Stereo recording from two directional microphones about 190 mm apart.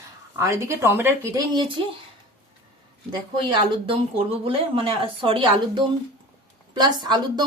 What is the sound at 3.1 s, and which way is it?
Speech, 25° right (ahead or behind).